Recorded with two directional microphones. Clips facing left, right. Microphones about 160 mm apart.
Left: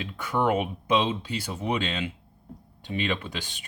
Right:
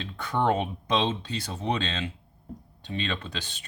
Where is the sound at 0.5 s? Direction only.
10° left (ahead or behind).